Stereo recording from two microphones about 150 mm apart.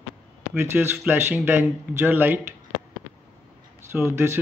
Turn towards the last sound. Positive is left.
turn(degrees=-10)  # may be behind; listen again after turning